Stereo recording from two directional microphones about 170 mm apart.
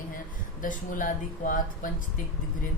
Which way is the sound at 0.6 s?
50° left (ahead or behind).